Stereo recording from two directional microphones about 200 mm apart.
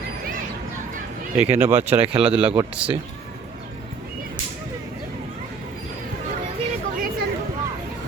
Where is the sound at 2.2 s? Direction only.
5° right (ahead or behind).